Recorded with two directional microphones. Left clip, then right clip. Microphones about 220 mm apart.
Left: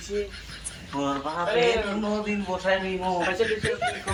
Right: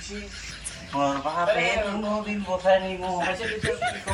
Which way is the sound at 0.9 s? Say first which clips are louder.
Right 3 dB; centre (ahead or behind).